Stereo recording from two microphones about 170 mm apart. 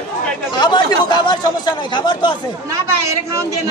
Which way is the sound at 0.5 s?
25° left (ahead or behind).